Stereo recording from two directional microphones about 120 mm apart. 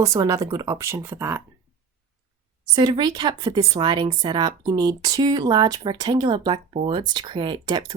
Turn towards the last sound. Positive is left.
turn(degrees=-35)  # may be behind; listen again after turning